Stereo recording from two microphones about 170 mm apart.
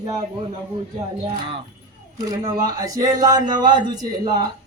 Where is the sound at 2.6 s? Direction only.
20° right (ahead or behind).